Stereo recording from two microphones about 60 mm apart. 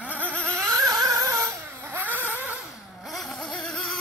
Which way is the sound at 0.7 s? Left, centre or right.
Right.